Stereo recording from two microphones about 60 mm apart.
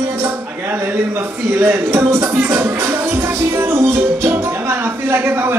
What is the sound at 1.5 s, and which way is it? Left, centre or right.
Music, right.